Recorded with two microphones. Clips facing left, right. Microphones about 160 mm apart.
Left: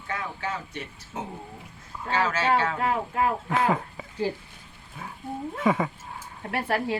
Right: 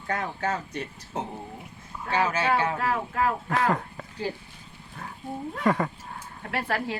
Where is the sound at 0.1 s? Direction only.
40° right (ahead or behind).